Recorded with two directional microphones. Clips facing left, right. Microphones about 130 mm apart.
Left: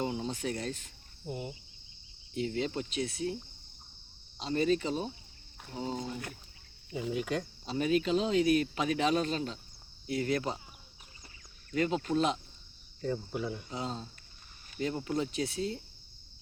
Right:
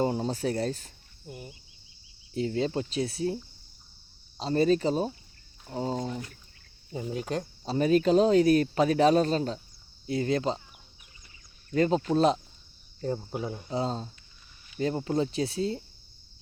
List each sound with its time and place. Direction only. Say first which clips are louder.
0.0 s speech: right 6 dB; 40° right (ahead or behind)
1.3 s cricket: left 5 dB; 25° left (ahead or behind)
2.3 s speech: right 5 dB; 35° right (ahead or behind)
4.4 s speech: right 5 dB; 35° right (ahead or behind)
10.1 s speech: right 4 dB; 25° right (ahead or behind)
11.7 s speech: right 5 dB; 35° right (ahead or behind)
13.7 s speech: right 7 dB; 35° right (ahead or behind)